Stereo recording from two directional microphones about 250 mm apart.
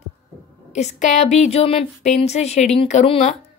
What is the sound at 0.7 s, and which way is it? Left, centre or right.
A woman's voice, left.